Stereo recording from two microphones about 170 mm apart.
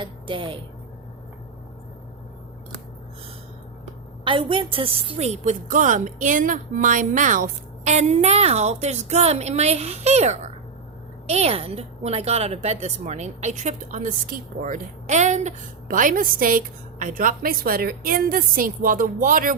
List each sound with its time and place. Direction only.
0.0 s a woman's voice: 30° right (ahead or behind)
4.2 s a woman's voice: 30° right (ahead or behind); by 19.5 s 55° right (ahead or behind)